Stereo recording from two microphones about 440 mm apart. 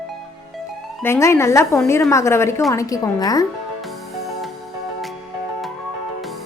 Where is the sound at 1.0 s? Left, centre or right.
Centre.